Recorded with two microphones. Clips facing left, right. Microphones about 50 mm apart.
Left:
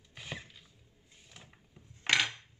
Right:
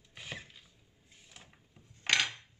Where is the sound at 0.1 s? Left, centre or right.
Centre.